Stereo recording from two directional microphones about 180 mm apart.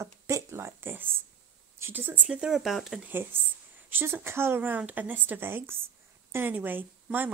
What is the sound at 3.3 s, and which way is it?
A woman's voice, 10° right (ahead or behind).